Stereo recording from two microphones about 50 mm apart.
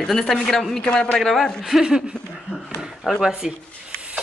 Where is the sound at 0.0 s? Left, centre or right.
Centre.